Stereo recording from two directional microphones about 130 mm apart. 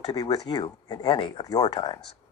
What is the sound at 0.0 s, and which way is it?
Speech, 30° left (ahead or behind).